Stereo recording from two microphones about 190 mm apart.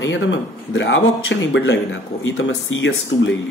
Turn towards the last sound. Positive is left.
turn(degrees=85)